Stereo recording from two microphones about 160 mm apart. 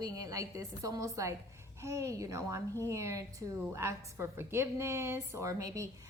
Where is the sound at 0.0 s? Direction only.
20° right (ahead or behind).